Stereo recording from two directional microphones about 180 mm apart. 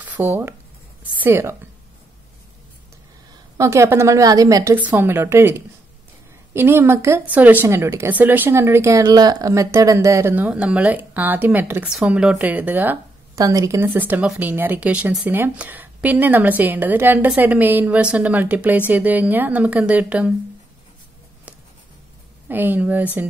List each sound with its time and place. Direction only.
0.0 s speech: 10° right (ahead or behind)
3.5 s speech: 15° right (ahead or behind)
22.5 s speech: 10° right (ahead or behind)